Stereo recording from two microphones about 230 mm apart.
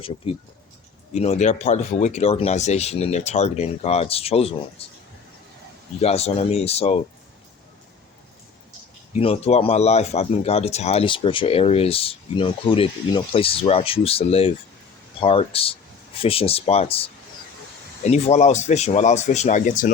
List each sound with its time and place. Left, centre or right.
0.2 s speech: left
6.0 s speech: left
9.1 s speech: left